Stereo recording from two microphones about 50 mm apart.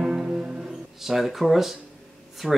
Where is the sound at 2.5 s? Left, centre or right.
Centre.